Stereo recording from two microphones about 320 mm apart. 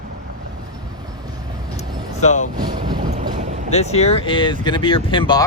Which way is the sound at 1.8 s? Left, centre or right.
Left.